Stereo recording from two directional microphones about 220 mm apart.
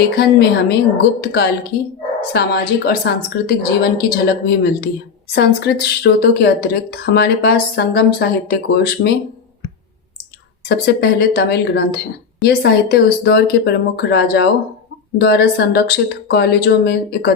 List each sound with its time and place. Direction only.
0.0 s a woman's voice: 45° left (ahead or behind)
10.7 s a woman's voice: 45° left (ahead or behind)